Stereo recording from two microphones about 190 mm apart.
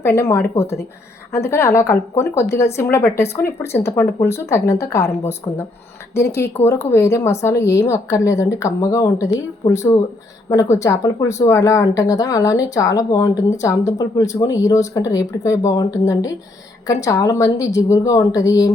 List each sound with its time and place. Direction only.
0.0 s speech: 15° left (ahead or behind)